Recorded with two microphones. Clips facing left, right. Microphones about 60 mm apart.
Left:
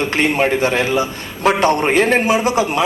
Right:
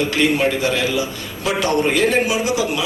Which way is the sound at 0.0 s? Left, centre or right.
Left.